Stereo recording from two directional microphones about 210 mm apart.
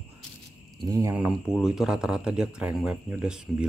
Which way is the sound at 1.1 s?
5° right (ahead or behind).